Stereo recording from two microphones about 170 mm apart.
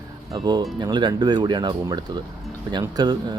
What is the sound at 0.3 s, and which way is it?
Speech, 25° right (ahead or behind).